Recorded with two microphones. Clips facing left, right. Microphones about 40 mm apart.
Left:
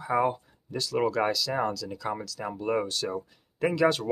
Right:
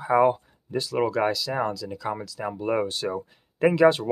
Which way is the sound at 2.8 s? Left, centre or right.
Right.